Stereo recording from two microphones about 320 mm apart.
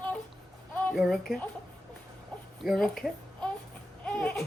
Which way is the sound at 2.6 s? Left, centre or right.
Centre.